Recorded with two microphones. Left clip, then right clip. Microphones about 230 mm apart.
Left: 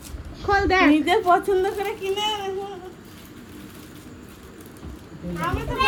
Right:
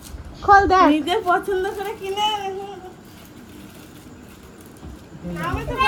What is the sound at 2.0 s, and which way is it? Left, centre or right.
Speech, centre.